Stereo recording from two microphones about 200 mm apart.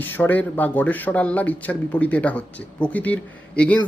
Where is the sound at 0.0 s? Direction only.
10° left (ahead or behind).